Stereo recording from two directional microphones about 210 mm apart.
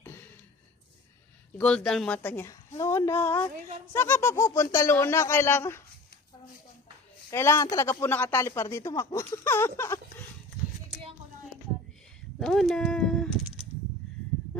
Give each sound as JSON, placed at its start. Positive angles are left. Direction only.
{"t": 0.0, "sound": "a sound", "side_deg": 10}
{"t": 1.5, "sound": "speech", "side_deg": 5}
{"t": 3.5, "sound": "a woman's voice", "side_deg": -35}
{"t": 3.9, "sound": "speech", "side_deg": 10}
{"t": 7.3, "sound": "speech", "side_deg": 10}
{"t": 12.4, "sound": "a sound", "side_deg": 0}